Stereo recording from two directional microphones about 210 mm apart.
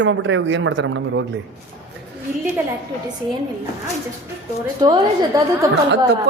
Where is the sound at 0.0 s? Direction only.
60° right (ahead or behind).